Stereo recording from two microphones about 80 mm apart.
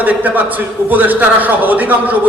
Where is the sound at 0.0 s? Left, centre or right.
Right.